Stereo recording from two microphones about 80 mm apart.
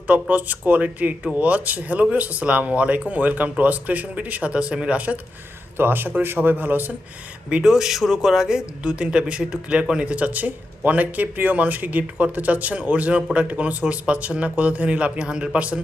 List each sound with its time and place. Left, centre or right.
0.1 s speech: centre
7.5 s speech: centre